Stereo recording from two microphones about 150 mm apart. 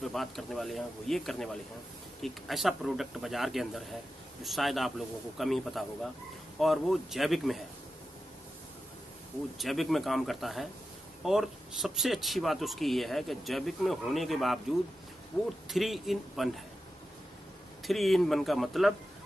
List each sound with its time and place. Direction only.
0.0 s speech: centre (ahead or behind)
9.6 s speech: centre (ahead or behind)
15.3 s speech: 15° left (ahead or behind)
15.7 s speech: centre (ahead or behind)
17.8 s speech: centre (ahead or behind)